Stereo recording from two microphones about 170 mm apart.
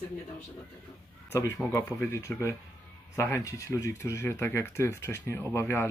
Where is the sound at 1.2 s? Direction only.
15° left (ahead or behind).